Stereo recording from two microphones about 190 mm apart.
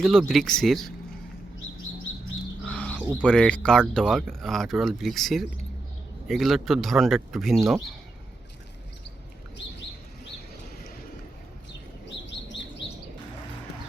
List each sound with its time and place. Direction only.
0.0 s speech: centre (ahead or behind)
1.9 s bird: 90° left
2.6 s bird: 5° left (ahead or behind)
3.2 s speech: 5° left (ahead or behind)